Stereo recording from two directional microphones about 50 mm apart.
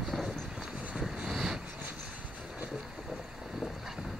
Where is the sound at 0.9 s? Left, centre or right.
Centre.